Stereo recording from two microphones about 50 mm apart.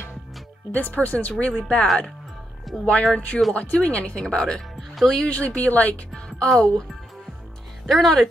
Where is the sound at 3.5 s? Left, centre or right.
Left.